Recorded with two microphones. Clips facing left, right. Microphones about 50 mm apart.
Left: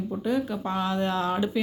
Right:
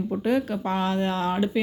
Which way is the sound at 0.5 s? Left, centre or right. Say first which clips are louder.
Right 2 dB; right.